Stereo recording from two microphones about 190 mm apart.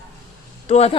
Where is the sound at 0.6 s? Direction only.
30° left (ahead or behind).